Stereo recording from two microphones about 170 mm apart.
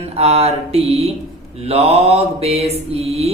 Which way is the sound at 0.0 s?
35° right (ahead or behind).